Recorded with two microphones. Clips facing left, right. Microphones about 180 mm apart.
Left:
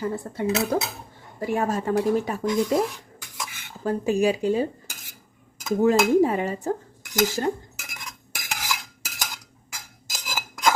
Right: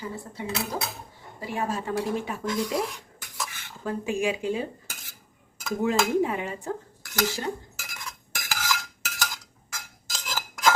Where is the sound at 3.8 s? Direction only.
40° left (ahead or behind).